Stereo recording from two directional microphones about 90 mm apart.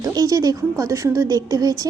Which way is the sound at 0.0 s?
45° right (ahead or behind).